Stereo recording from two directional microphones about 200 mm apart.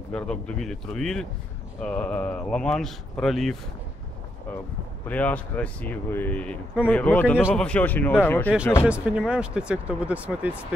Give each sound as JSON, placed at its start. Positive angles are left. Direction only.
{"t": 0.1, "sound": "speech", "side_deg": 5}
{"t": 5.0, "sound": "speech", "side_deg": 5}
{"t": 8.8, "sound": "speech", "side_deg": -5}